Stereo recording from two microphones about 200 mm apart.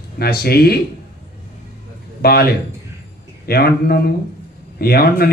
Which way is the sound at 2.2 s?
50° left (ahead or behind).